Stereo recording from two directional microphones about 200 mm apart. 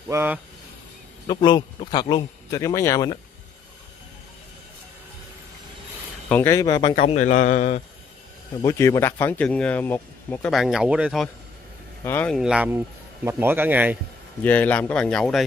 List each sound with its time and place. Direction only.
0.1 s speech: 10° right (ahead or behind)
1.2 s speech: 20° left (ahead or behind)
6.2 s speech: 10° left (ahead or behind)
7.0 s speech: 35° left (ahead or behind)
8.5 s speech: 15° left (ahead or behind)
10.5 s speech: centre (ahead or behind)
12.0 s speech: 10° left (ahead or behind)
12.4 s speech: 5° right (ahead or behind)
14.4 s speech: 10° left (ahead or behind)